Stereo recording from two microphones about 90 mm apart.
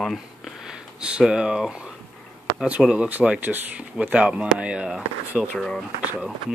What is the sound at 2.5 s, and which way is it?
Speech, 15° right (ahead or behind).